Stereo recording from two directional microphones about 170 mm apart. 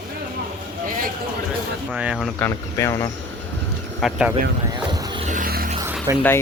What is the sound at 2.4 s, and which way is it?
Speech, 15° left (ahead or behind).